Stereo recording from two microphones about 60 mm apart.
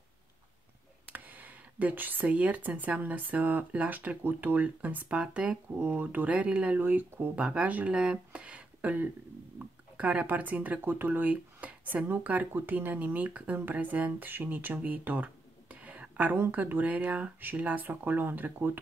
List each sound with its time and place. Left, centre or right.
1.1 s whispering: right
2.2 s speech: right
6.8 s speech: right
7.3 s speech: centre
7.9 s a sound: centre
9.6 s speech: right